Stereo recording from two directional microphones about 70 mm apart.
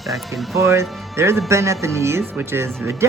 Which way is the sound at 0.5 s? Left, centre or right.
Right.